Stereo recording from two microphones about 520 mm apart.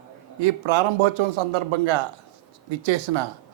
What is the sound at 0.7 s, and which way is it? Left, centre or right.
A man's voice, right.